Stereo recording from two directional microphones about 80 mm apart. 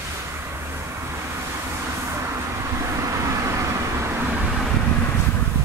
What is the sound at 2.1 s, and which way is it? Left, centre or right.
Vehicle, right.